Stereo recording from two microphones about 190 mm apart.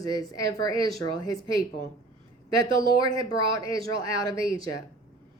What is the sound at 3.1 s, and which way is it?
Speech, 15° left (ahead or behind).